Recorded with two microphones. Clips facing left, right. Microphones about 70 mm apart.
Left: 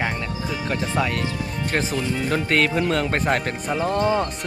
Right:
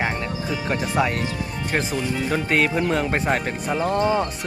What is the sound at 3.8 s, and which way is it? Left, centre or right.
Speech, right.